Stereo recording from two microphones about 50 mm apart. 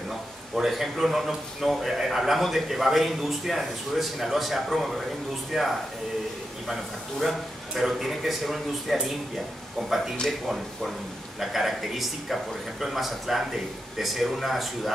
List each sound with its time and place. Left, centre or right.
0.6 s a man's voice: centre
11.3 s a man's voice: centre